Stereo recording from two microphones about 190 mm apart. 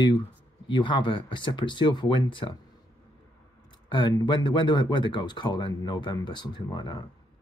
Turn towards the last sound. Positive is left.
turn(degrees=25)  # may be behind; listen again after turning